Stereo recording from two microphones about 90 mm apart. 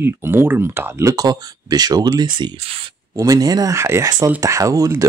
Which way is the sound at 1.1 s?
45° right (ahead or behind).